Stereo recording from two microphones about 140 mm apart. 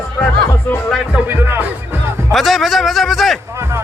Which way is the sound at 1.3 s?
15° right (ahead or behind).